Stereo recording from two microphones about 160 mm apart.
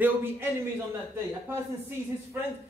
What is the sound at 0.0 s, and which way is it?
Speech, 15° right (ahead or behind).